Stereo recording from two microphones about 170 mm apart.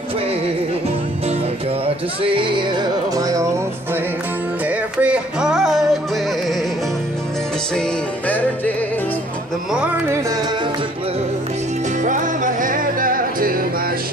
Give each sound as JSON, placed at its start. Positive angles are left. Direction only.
{"t": 2.2, "sound": "music", "side_deg": -30}
{"t": 4.6, "sound": "music", "side_deg": -5}
{"t": 8.3, "sound": "music", "side_deg": 10}
{"t": 9.7, "sound": "music", "side_deg": -5}
{"t": 12.0, "sound": "music", "side_deg": -50}